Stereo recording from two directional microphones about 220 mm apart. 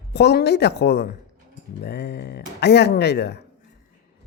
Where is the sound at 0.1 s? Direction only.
50° left (ahead or behind).